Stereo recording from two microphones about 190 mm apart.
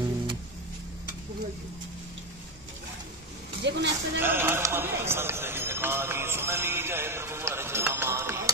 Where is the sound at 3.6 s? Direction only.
65° right (ahead or behind).